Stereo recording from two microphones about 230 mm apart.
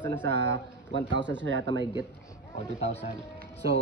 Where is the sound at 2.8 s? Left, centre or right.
Left.